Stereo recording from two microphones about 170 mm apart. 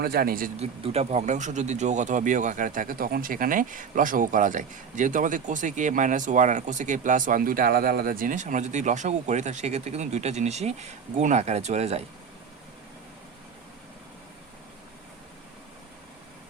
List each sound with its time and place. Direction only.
0.0 s speech: 65° right (ahead or behind)
0.6 s speech: 40° right (ahead or behind)